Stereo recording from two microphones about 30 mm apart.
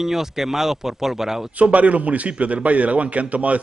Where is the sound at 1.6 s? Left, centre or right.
Right.